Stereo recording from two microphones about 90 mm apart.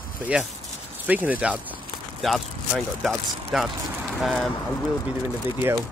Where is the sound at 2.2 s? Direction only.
Centre (ahead or behind).